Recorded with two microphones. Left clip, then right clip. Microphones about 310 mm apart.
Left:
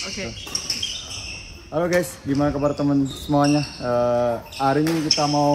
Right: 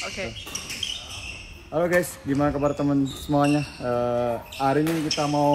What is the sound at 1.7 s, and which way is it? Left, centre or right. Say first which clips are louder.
Speech: left 1 dB; centre.